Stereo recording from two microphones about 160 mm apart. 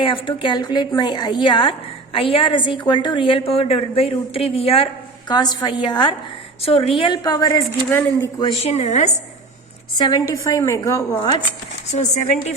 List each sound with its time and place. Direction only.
0.0 s a woman's voice: 30° left (ahead or behind)
5.3 s a woman's voice: 25° left (ahead or behind)
7.9 s a woman's voice: 10° left (ahead or behind)
8.4 s a woman's voice: 30° left (ahead or behind)
8.7 s speech: 45° left (ahead or behind)
10.0 s a woman's voice: 25° left (ahead or behind)
11.9 s speech: 45° left (ahead or behind)